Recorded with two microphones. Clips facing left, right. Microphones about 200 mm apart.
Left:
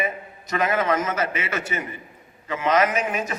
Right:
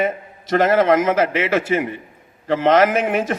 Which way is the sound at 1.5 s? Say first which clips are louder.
Right 10 dB; 65° right (ahead or behind).